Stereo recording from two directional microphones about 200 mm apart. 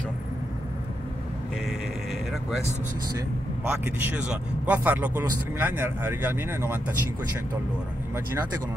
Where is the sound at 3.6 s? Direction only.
10° right (ahead or behind).